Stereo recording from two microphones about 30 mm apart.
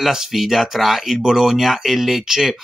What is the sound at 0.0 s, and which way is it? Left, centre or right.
Speech, centre.